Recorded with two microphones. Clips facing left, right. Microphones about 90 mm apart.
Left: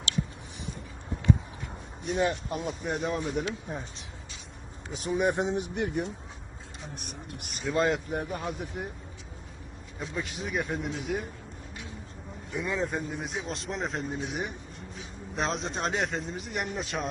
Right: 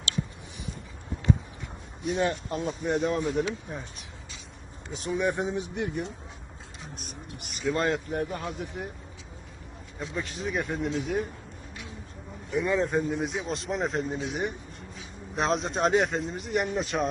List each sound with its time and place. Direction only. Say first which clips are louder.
2.0 s speech: right 1 dB; centre (ahead or behind)
2.3 s speech: right 2 dB; 10° left (ahead or behind)
2.8 s speech: right 6 dB; centre (ahead or behind)
4.9 s speech: even; centre (ahead or behind)
5.1 s speech: left 1 dB; 20° left (ahead or behind)
5.5 s speech: left 1 dB; 60° left (ahead or behind)
7.7 s speech: even; 15° left (ahead or behind)
10.0 s speech: right 2 dB; centre (ahead or behind)
12.5 s speech: right 5 dB; centre (ahead or behind)